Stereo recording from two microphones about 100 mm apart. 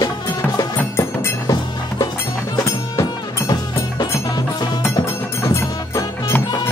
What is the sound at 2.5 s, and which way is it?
Music, 35° left (ahead or behind).